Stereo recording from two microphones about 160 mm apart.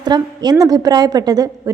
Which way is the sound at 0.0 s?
25° right (ahead or behind).